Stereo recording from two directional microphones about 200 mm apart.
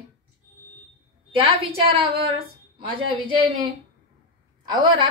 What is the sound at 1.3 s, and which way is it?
A woman's voice, 30° right (ahead or behind).